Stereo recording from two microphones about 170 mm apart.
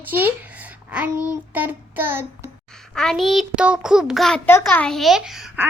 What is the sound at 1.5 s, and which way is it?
Child singing, 10° right (ahead or behind).